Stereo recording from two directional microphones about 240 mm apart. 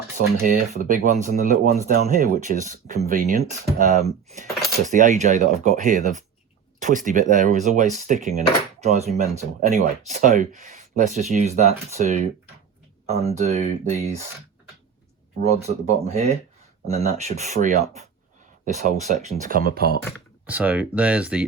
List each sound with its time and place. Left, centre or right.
0.4 s speech: right
15.4 s speech: right
20.1 s speech: centre